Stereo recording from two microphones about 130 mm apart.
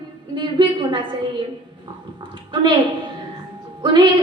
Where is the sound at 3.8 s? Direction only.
35° right (ahead or behind).